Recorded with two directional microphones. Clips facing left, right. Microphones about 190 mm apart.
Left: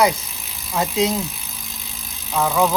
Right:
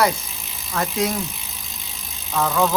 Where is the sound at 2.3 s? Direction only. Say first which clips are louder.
Left 2 dB; 10° left (ahead or behind).